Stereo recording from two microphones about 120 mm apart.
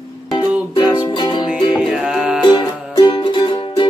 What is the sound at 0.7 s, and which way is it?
Music, 40° left (ahead or behind).